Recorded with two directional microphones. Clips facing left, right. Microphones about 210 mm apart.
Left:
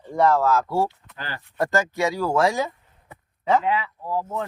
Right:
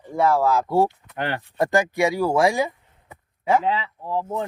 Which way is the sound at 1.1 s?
65° right (ahead or behind).